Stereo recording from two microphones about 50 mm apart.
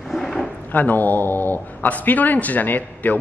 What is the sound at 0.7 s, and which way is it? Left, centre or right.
A man's voice, left.